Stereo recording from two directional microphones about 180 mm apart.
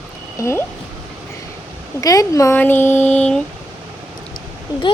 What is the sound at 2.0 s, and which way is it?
Speech, 20° left (ahead or behind).